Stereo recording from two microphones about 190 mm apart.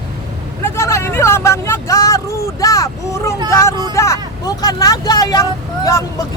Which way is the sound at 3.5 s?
15° left (ahead or behind).